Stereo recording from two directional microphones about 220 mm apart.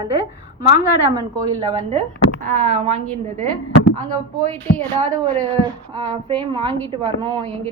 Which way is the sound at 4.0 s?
35° right (ahead or behind).